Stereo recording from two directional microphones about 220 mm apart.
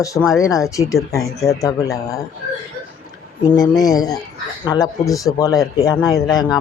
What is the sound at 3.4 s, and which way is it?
Speech, 15° left (ahead or behind).